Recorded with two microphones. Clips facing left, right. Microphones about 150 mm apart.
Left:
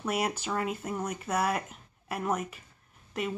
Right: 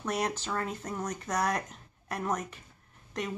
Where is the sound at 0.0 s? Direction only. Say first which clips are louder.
Left 1 dB; 10° left (ahead or behind).